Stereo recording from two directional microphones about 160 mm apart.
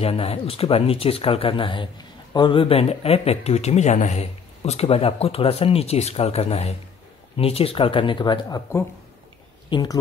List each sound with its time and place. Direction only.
0.0 s speech: 40° left (ahead or behind)